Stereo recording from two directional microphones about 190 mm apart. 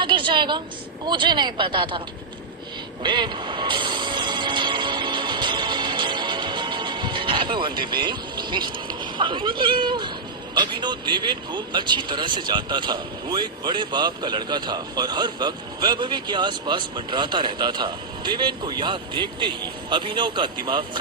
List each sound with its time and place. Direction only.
0.0 s a sound: 25° right (ahead or behind)
1.0 s speech: 25° right (ahead or behind)
3.0 s music: 25° right (ahead or behind)
10.5 s speech: 25° right (ahead or behind)